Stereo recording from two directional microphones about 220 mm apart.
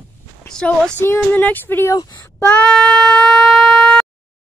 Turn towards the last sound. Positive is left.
turn(degrees=0)  # may be behind; listen again after turning